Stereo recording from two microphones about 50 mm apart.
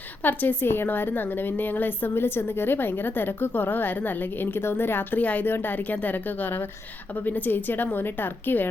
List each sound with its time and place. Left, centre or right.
0.2 s a woman's voice: left